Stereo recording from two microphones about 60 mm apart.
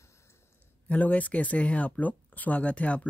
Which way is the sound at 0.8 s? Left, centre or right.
Left.